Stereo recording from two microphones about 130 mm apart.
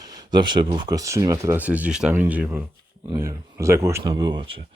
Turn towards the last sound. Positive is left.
turn(degrees=-40)  # may be behind; listen again after turning